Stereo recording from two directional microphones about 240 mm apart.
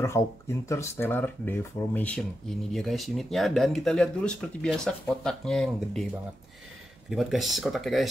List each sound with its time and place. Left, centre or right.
0.0 s speech: centre
7.1 s speech: centre